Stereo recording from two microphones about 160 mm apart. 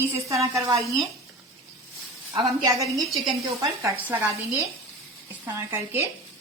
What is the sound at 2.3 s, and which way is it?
A woman's voice, 25° right (ahead or behind).